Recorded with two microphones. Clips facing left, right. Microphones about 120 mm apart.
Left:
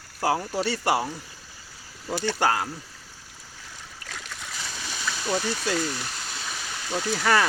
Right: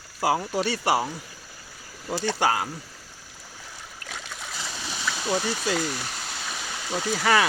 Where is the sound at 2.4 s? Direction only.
10° right (ahead or behind).